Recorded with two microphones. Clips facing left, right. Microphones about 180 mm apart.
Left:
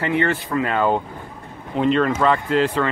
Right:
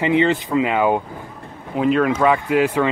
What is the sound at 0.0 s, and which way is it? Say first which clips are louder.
Speech: right 4 dB; 15° right (ahead or behind).